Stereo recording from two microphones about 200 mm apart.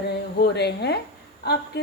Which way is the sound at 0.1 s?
55° left (ahead or behind).